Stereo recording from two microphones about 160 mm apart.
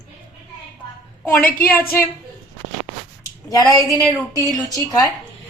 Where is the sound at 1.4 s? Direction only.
65° left (ahead or behind).